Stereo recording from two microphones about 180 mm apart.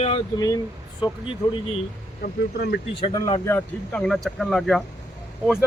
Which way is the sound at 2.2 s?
60° left (ahead or behind).